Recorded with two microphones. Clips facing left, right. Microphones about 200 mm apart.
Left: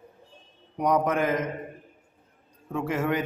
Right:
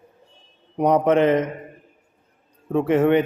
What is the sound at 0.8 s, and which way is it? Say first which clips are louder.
Speech: right 7 dB; 30° right (ahead or behind).